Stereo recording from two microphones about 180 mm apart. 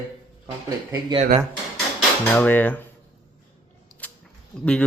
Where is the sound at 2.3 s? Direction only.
10° left (ahead or behind).